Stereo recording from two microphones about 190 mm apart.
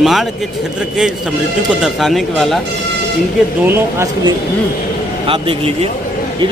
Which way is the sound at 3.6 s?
10° right (ahead or behind).